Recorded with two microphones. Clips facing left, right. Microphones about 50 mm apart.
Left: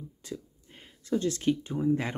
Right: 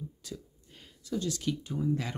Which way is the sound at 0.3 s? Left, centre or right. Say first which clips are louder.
Left 6 dB; left.